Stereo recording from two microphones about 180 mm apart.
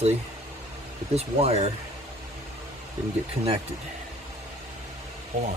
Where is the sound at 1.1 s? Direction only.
35° right (ahead or behind).